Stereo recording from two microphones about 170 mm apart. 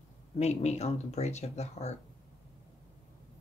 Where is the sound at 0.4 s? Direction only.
40° left (ahead or behind).